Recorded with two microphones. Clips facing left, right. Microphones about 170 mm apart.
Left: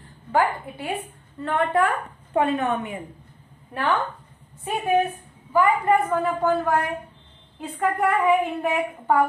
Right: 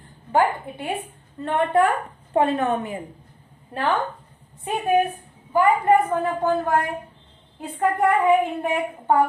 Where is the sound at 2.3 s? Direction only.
35° right (ahead or behind).